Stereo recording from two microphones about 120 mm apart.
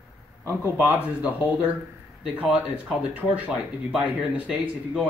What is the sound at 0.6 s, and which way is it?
Speech, 15° right (ahead or behind).